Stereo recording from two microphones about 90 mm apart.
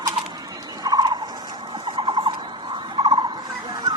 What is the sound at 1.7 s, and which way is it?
Turkey, 65° right (ahead or behind).